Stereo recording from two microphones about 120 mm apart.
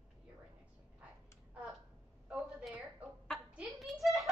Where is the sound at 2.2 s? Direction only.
10° right (ahead or behind).